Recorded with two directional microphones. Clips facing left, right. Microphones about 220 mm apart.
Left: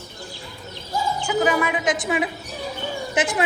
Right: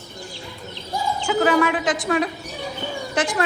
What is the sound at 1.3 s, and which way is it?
A woman's voice, 5° left (ahead or behind).